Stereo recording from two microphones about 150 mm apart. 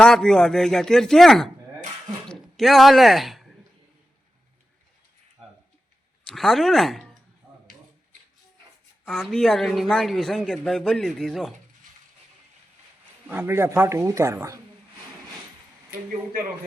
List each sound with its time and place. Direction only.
0.0 s speech: 5° left (ahead or behind)
6.2 s speech: centre (ahead or behind)
9.0 s speech: centre (ahead or behind)
13.2 s speech: 10° right (ahead or behind)